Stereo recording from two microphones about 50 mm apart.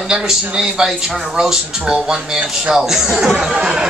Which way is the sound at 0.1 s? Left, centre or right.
Centre.